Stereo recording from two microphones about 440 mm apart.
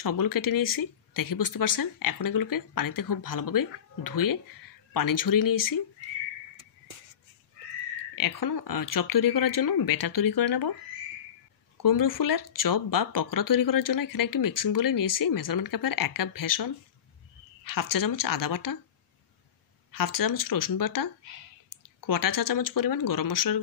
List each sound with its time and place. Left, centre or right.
0.0 s speech: left
8.2 s speech: left
11.8 s speech: left
19.9 s speech: left